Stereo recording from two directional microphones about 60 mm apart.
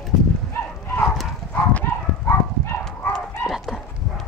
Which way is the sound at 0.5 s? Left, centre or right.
Left.